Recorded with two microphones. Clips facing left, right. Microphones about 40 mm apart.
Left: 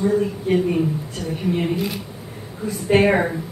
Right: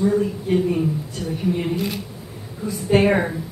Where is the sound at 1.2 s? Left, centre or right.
Left.